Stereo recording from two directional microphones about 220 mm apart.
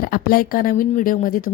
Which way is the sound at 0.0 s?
45° left (ahead or behind).